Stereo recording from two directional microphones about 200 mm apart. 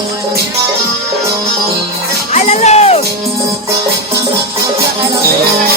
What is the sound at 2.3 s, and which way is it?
Music, 35° left (ahead or behind).